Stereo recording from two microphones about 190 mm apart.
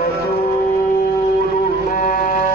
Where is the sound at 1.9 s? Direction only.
45° left (ahead or behind).